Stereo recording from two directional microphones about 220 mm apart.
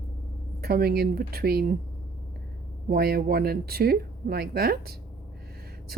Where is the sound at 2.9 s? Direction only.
45° right (ahead or behind).